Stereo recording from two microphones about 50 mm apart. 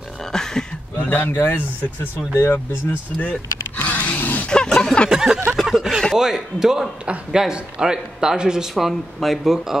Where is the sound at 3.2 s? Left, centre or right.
Left.